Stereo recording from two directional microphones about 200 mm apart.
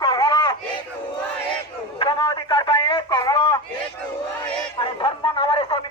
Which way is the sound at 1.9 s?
25° left (ahead or behind).